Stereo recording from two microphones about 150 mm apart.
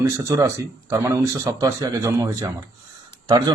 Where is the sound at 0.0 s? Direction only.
20° right (ahead or behind).